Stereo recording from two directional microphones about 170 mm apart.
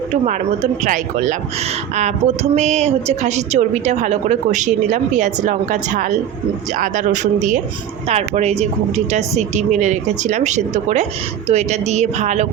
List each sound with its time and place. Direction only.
0.3 s a woman's voice: 45° right (ahead or behind)